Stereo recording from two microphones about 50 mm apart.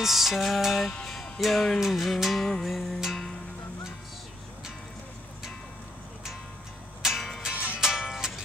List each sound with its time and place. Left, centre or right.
0.0 s music: centre
0.9 s music: centre
1.4 s music: centre
7.0 s music: centre
7.5 s music: right
7.8 s music: centre